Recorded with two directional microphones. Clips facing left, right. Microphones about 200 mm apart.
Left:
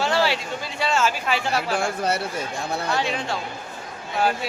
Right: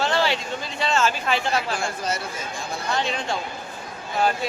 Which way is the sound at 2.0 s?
60° left (ahead or behind).